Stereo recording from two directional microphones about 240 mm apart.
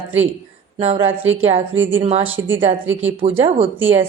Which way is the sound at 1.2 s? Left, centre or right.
Right.